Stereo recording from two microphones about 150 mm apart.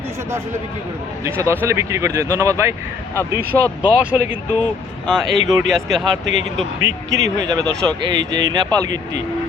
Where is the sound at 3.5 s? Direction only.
10° left (ahead or behind).